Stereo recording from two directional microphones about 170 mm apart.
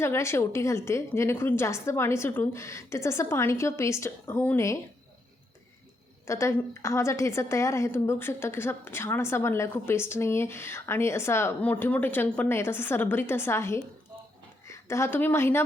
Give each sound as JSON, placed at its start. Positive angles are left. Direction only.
{"t": 0.0, "sound": "a woman's voice", "side_deg": 15}
{"t": 6.2, "sound": "a woman's voice", "side_deg": 15}